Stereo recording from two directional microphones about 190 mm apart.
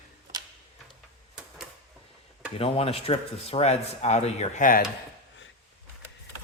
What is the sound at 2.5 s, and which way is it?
Speech, 30° left (ahead or behind).